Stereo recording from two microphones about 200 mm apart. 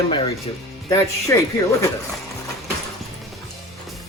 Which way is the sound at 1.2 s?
15° left (ahead or behind).